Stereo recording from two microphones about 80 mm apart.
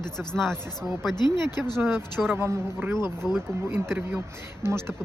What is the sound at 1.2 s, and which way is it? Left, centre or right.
Speech, left.